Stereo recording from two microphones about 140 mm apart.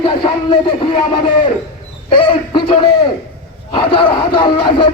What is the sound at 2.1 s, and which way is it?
Speech, 35° left (ahead or behind).